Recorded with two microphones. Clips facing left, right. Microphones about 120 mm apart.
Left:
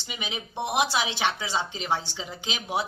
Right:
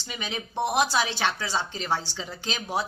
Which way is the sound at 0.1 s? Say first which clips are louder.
Right 2 dB; 15° left (ahead or behind).